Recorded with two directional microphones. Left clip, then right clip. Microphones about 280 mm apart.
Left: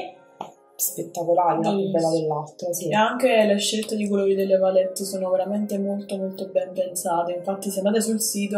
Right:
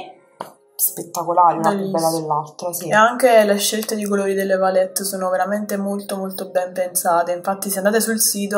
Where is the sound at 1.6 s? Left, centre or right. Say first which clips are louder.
Right 4 dB; right.